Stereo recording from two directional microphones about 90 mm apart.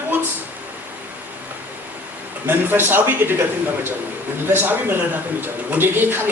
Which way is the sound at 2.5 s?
25° right (ahead or behind).